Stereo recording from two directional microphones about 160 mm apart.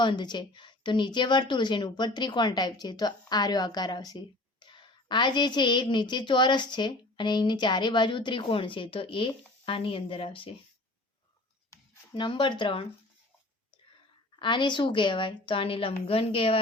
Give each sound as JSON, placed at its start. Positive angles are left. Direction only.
{"t": 0.0, "sound": "a woman's voice", "side_deg": 30}
{"t": 11.7, "sound": "speech", "side_deg": 30}
{"t": 14.3, "sound": "a woman's voice", "side_deg": 30}